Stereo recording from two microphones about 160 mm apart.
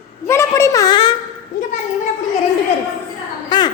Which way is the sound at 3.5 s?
25° left (ahead or behind).